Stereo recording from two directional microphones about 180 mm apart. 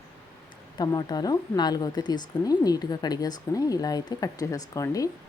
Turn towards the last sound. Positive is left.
turn(degrees=20)  # may be behind; listen again after turning